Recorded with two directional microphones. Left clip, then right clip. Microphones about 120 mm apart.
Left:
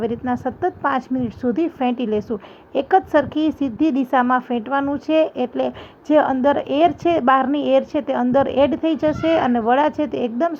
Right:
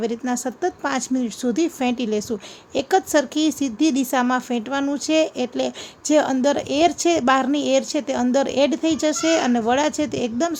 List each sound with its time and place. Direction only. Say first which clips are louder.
0.0 s a woman's voice: left 2 dB; 10° right (ahead or behind)
4.9 s a woman's voice: left 1 dB; 10° right (ahead or behind)
9.5 s speech: left 2 dB; 25° right (ahead or behind)
9.7 s a woman's voice: left 3 dB; 10° right (ahead or behind)